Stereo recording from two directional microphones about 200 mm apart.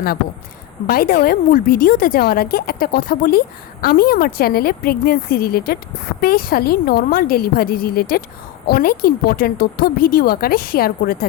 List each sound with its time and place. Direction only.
0.9 s a woman's voice: 45° left (ahead or behind)